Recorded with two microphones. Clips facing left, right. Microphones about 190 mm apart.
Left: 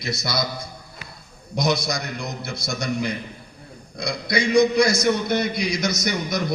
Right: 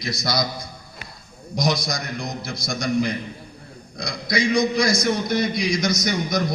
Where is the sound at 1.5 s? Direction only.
60° left (ahead or behind).